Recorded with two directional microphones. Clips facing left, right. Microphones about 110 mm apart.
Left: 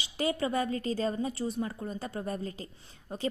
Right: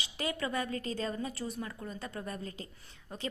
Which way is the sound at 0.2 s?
30° left (ahead or behind).